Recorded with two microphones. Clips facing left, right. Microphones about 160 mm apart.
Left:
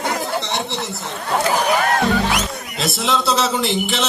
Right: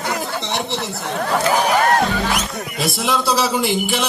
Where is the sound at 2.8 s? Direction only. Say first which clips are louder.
Even; 15° right (ahead or behind).